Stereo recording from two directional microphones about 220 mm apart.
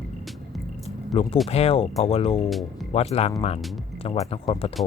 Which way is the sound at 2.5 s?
Centre (ahead or behind).